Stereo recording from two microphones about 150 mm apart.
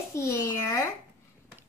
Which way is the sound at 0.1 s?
20° left (ahead or behind).